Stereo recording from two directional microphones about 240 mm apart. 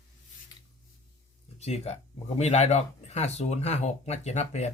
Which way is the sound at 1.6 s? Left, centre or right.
Left.